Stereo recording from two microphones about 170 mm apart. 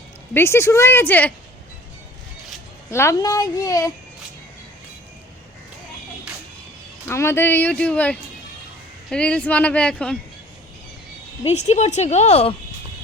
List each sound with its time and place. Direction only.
0.3 s speech: 15° left (ahead or behind)
2.9 s speech: 15° left (ahead or behind)
7.1 s speech: 15° left (ahead or behind)
11.4 s a woman's voice: 40° left (ahead or behind)